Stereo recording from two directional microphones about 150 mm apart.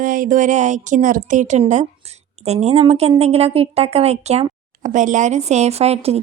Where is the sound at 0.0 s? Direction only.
65° right (ahead or behind).